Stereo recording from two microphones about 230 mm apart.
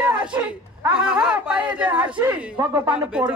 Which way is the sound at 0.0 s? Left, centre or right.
Centre.